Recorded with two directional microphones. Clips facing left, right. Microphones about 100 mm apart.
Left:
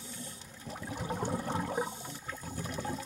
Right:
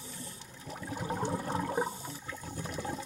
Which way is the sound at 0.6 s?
10° left (ahead or behind).